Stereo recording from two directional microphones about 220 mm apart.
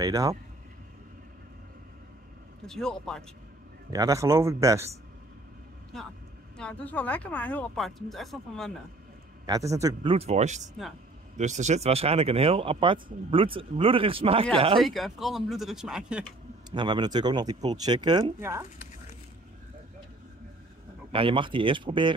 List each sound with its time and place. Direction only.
0.0 s speech: 15° right (ahead or behind)
2.6 s speech: centre (ahead or behind)
3.9 s speech: 15° right (ahead or behind)
6.6 s speech: 5° left (ahead or behind)
9.5 s speech: 15° right (ahead or behind)
10.1 s speech: 30° right (ahead or behind)
14.8 s speech: centre (ahead or behind)
16.7 s speech: 20° right (ahead or behind)
21.1 s speech: 25° right (ahead or behind)